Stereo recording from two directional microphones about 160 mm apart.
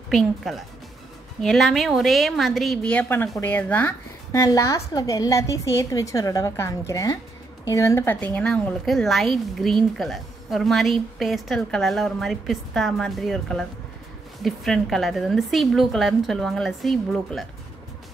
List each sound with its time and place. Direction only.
0.1 s a woman's voice: centre (ahead or behind)